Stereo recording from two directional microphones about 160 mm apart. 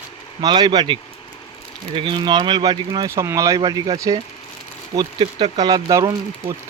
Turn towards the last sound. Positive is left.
turn(degrees=-20)  # may be behind; listen again after turning